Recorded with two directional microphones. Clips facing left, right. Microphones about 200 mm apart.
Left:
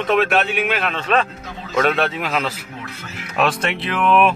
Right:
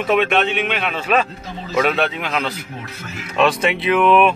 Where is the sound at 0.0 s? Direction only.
Centre (ahead or behind).